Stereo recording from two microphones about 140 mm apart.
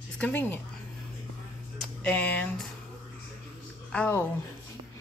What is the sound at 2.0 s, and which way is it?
Speech, 10° left (ahead or behind).